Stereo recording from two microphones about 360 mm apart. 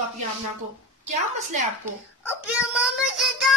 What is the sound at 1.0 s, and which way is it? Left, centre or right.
Speech, centre.